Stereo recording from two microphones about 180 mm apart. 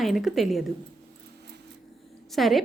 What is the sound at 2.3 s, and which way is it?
Speech, centre (ahead or behind).